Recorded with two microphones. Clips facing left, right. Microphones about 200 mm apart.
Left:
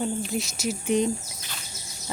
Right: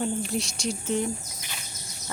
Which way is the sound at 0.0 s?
Centre (ahead or behind).